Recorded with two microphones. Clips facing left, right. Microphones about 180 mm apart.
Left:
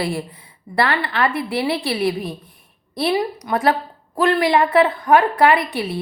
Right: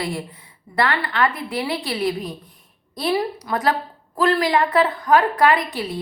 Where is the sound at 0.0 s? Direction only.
30° left (ahead or behind).